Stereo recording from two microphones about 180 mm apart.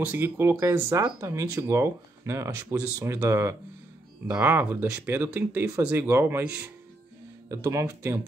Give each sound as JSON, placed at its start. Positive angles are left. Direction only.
{"t": 0.0, "sound": "speech", "side_deg": -10}